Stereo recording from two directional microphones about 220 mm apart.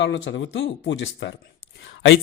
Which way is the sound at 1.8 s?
55° left (ahead or behind).